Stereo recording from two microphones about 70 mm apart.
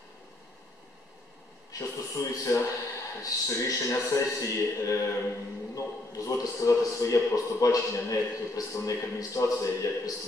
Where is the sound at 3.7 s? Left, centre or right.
Left.